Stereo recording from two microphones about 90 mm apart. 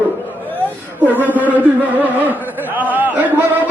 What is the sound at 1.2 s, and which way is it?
Speech, 20° right (ahead or behind).